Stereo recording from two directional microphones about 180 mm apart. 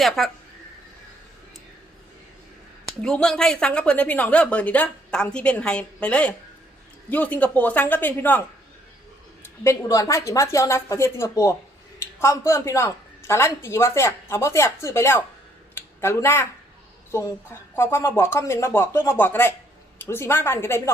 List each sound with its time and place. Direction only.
0.2 s speech: centre (ahead or behind)
2.8 s a woman's voice: 5° left (ahead or behind)
9.4 s a woman's voice: 15° left (ahead or behind)
15.7 s a sound: 15° left (ahead or behind)
17.7 s a woman's voice: 15° left (ahead or behind)